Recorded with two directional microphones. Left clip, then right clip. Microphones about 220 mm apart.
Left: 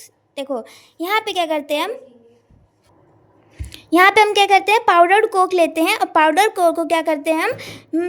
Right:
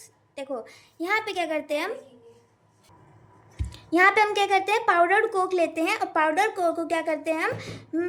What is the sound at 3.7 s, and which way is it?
A woman's voice, 40° left (ahead or behind).